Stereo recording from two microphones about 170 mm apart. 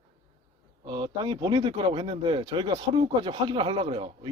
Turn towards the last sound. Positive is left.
turn(degrees=-30)  # may be behind; listen again after turning